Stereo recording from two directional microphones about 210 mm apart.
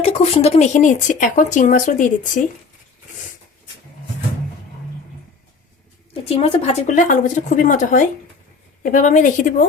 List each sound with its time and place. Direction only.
0.0 s speech: 30° left (ahead or behind)
6.2 s speech: 30° left (ahead or behind)